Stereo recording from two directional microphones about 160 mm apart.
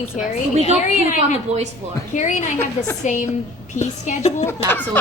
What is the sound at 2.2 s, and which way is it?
Speech, 50° left (ahead or behind).